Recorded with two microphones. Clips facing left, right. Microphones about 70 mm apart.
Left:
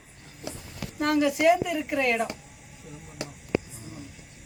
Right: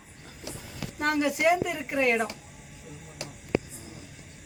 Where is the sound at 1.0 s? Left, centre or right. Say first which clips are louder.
Left 3 dB; right.